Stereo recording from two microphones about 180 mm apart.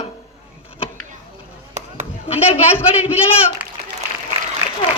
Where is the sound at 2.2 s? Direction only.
30° left (ahead or behind).